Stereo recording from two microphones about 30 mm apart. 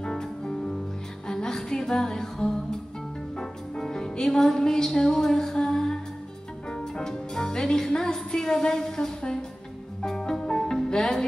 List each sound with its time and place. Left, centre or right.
0.0 s music: left